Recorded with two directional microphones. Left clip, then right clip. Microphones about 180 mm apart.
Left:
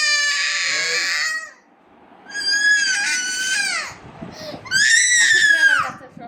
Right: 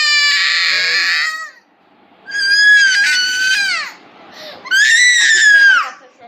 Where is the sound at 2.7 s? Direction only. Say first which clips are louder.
Right 9 dB; 10° left (ahead or behind).